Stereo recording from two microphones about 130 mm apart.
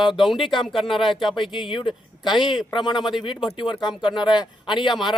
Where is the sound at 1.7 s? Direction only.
40° left (ahead or behind).